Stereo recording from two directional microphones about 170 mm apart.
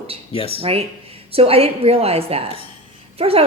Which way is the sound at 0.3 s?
35° left (ahead or behind).